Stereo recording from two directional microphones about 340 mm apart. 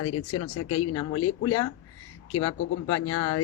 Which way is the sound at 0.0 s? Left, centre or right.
Left.